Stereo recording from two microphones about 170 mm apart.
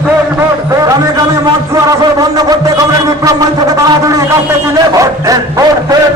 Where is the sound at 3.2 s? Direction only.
20° right (ahead or behind).